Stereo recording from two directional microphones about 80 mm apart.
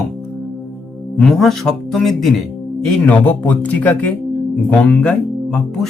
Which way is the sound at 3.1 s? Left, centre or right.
Centre.